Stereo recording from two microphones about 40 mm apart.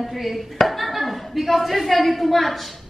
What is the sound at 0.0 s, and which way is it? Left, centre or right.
A woman's voice, centre.